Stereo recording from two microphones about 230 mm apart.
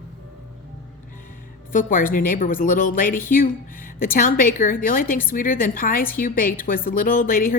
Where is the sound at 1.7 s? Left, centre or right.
Left.